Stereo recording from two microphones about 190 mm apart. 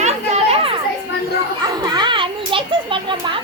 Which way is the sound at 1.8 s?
25° right (ahead or behind).